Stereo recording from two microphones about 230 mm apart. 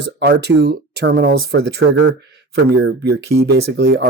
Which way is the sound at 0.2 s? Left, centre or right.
Right.